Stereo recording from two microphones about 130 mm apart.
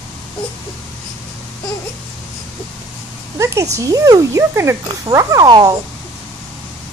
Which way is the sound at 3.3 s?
25° right (ahead or behind).